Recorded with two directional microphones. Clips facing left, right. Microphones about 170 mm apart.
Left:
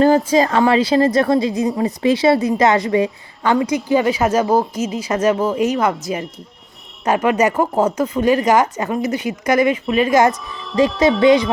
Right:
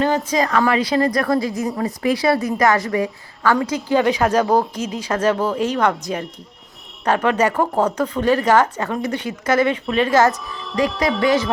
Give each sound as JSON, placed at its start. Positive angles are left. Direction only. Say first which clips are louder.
{"t": 0.0, "sound": "a woman's voice", "louder": "left 6 dB", "side_deg": 35}
{"t": 3.6, "sound": "a woman's voice", "louder": "left 2 dB", "side_deg": 10}